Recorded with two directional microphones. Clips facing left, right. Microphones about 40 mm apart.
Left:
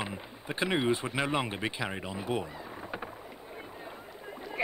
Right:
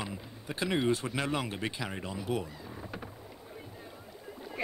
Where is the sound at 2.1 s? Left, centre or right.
Left.